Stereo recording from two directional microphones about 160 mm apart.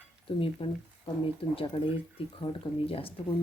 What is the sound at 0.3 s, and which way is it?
Speech, 35° left (ahead or behind).